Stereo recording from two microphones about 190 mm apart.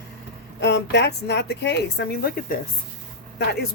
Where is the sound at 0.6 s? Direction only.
65° left (ahead or behind).